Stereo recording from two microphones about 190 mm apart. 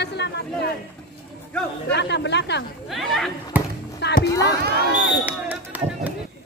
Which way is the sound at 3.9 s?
65° left (ahead or behind).